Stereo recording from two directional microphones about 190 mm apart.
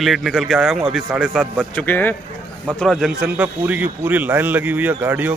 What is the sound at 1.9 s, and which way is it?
A man's voice, 10° left (ahead or behind).